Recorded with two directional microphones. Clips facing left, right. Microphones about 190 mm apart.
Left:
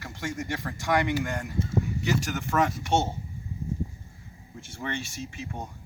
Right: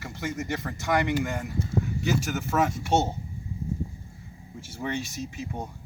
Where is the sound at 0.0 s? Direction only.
Centre (ahead or behind).